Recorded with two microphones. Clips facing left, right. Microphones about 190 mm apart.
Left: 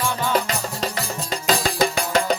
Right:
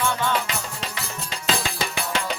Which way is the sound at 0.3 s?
40° left (ahead or behind).